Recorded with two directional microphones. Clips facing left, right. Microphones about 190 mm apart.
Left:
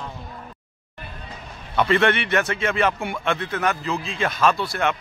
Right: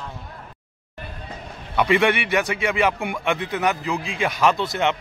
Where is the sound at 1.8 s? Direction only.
15° right (ahead or behind).